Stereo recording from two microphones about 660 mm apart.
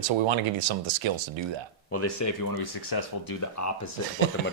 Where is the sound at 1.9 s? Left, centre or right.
Left.